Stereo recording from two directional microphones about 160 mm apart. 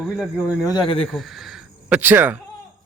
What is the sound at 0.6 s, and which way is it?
Speech, 30° left (ahead or behind).